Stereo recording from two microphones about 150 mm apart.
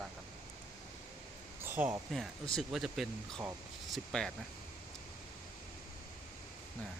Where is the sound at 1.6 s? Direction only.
15° right (ahead or behind).